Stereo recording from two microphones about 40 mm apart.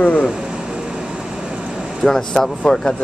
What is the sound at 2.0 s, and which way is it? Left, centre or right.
Speech, centre.